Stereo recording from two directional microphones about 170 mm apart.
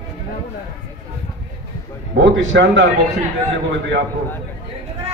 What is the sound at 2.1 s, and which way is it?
Speech, 90° right.